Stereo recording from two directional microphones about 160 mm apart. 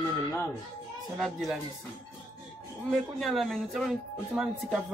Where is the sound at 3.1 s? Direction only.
Centre (ahead or behind).